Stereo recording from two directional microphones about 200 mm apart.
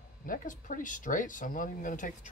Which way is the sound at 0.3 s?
40° left (ahead or behind).